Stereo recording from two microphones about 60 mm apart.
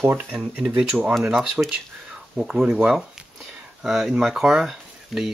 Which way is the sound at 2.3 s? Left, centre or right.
Centre.